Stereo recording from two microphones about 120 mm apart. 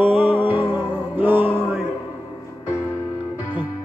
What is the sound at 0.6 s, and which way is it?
Music, 15° right (ahead or behind).